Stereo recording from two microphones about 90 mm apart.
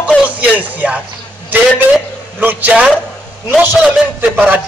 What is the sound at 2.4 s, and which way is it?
A man's voice, 15° right (ahead or behind).